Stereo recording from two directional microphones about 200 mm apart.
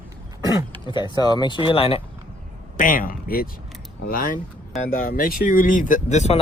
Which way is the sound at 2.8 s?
45° left (ahead or behind).